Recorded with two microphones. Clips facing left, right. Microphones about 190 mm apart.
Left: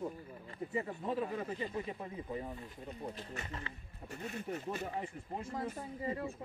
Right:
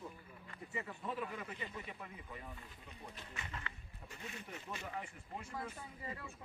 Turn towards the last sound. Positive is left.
turn(degrees=30)  # may be behind; listen again after turning